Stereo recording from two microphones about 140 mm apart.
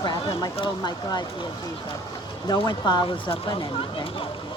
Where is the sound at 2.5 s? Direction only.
30° left (ahead or behind).